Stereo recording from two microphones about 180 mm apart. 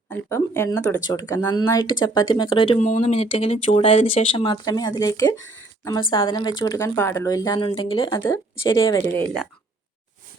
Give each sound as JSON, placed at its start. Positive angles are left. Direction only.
{"t": 0.1, "sound": "speech", "side_deg": 15}
{"t": 2.8, "sound": "speech", "side_deg": 40}
{"t": 8.8, "sound": "speech", "side_deg": 15}